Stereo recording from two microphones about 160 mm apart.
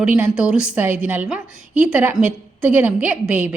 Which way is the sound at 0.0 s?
5° right (ahead or behind).